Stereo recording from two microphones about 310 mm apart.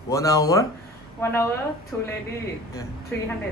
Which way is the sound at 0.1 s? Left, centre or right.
Centre.